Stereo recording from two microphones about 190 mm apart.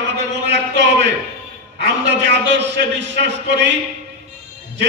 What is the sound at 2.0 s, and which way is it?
A man's voice, 65° right (ahead or behind).